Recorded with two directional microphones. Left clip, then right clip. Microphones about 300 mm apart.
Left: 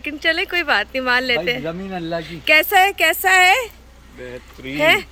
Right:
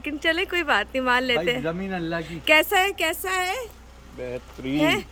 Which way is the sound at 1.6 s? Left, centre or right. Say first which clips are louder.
Left 2 dB; centre.